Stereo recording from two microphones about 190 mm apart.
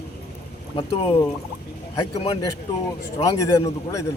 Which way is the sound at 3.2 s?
15° left (ahead or behind).